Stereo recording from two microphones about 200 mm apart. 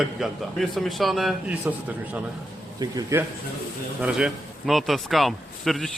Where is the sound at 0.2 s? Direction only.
Centre (ahead or behind).